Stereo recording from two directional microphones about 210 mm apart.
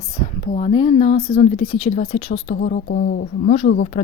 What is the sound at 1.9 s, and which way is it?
A woman's voice, 40° left (ahead or behind).